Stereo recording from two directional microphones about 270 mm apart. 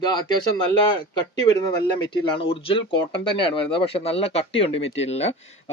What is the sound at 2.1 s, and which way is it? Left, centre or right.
Speech, centre.